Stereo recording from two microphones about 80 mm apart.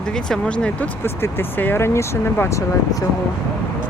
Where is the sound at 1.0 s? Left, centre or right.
Left.